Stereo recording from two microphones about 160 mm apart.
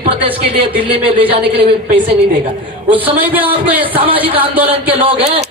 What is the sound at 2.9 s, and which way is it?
Speech, 35° right (ahead or behind).